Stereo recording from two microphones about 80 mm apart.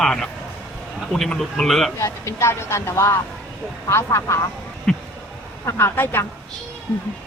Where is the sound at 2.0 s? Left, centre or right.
Left.